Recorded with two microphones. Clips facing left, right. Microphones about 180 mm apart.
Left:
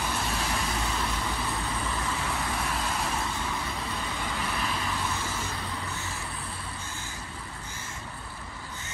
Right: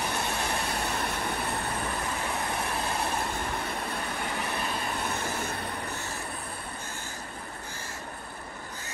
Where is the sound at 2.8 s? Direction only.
60° right (ahead or behind).